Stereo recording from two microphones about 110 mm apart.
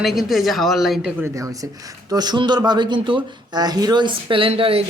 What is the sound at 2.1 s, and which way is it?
Speech, 40° right (ahead or behind).